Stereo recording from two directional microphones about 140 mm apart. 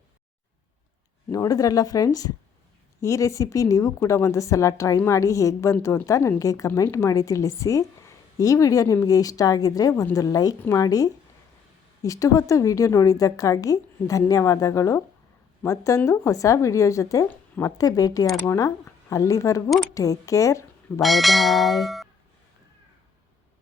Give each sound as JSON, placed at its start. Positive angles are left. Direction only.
{"t": 1.3, "sound": "a woman's voice", "side_deg": 25}
{"t": 21.0, "sound": "speech", "side_deg": 0}